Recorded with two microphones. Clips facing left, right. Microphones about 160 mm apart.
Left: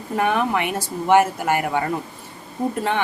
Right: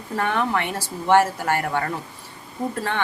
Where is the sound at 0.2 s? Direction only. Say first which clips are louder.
Left 3 dB; 15° left (ahead or behind).